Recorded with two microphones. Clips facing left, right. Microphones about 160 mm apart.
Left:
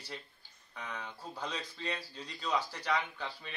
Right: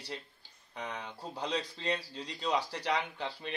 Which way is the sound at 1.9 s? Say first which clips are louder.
Right 4 dB; 70° right (ahead or behind).